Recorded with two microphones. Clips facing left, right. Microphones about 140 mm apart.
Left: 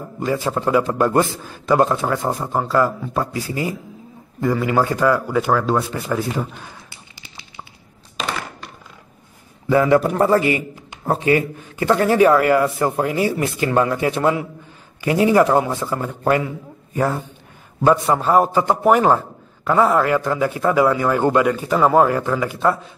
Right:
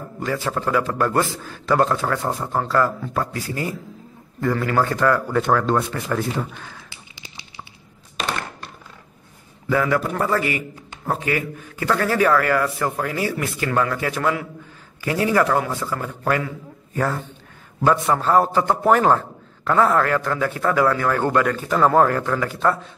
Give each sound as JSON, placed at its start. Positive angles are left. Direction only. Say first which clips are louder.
{"t": 0.2, "sound": "a man's voice", "louder": "left 3 dB", "side_deg": 15}
{"t": 9.7, "sound": "a man's voice", "louder": "left 6 dB", "side_deg": 25}